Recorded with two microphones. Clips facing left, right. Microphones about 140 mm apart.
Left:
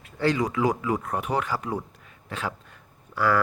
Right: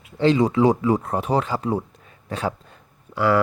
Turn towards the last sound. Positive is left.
turn(degrees=-20)  # may be behind; listen again after turning